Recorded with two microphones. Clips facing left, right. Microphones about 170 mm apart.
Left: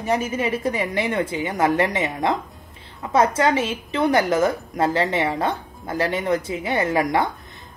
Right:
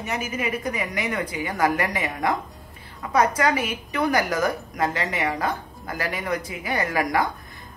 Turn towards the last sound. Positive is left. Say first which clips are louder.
# left 3 dB
turn(degrees=25)  # may be behind; listen again after turning